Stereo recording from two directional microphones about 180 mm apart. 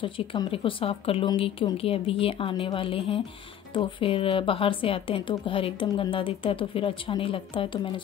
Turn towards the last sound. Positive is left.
turn(degrees=30)  # may be behind; listen again after turning